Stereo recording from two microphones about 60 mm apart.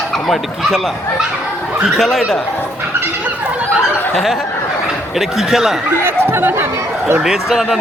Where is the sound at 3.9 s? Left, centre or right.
Left.